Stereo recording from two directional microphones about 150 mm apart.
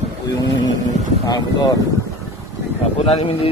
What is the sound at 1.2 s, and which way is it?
Speech, 25° left (ahead or behind).